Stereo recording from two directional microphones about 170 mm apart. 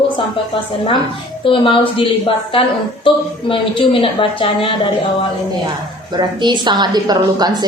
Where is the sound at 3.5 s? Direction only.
30° left (ahead or behind).